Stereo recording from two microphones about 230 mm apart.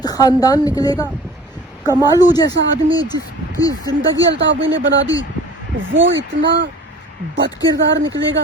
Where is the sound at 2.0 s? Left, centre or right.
Centre.